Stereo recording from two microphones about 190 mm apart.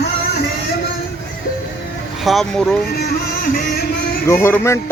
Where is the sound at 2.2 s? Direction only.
Centre (ahead or behind).